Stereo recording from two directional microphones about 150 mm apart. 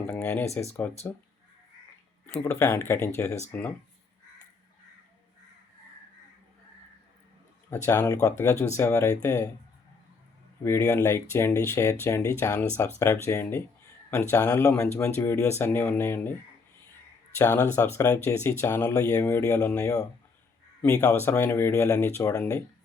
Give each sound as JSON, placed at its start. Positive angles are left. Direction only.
{"t": 0.1, "sound": "speech", "side_deg": 10}
{"t": 2.2, "sound": "speech", "side_deg": 15}
{"t": 7.7, "sound": "speech", "side_deg": 15}
{"t": 10.6, "sound": "speech", "side_deg": 20}
{"t": 17.3, "sound": "speech", "side_deg": 15}
{"t": 21.1, "sound": "speech", "side_deg": 15}